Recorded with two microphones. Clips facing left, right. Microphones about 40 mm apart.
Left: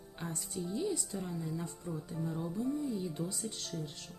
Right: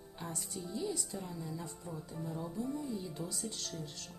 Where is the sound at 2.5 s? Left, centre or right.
Centre.